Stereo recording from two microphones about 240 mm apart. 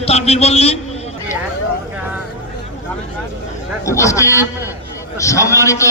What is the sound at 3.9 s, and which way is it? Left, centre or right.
A man's voice, centre.